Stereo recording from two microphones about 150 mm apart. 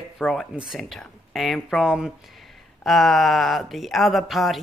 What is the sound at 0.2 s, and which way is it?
A man's voice, centre (ahead or behind).